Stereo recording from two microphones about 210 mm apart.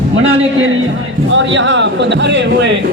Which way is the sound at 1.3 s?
60° right (ahead or behind).